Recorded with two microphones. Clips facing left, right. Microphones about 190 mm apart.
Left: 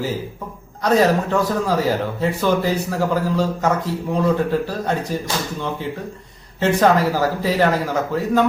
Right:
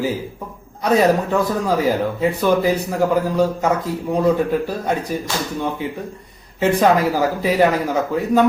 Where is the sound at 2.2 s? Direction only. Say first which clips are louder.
Right 2 dB; 15° right (ahead or behind).